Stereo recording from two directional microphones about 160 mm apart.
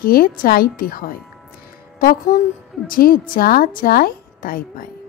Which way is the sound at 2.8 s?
65° left (ahead or behind).